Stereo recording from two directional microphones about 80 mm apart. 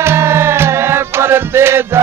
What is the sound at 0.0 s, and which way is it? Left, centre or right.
Music, right.